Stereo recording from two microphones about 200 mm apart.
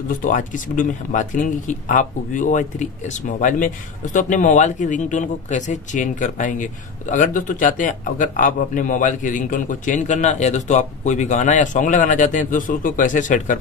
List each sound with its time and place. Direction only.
0.2 s speech: 40° left (ahead or behind)